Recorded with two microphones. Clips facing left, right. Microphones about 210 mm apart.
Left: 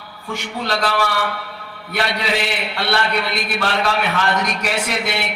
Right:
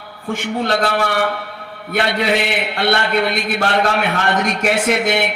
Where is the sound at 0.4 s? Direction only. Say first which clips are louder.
Right 4 dB; 55° right (ahead or behind).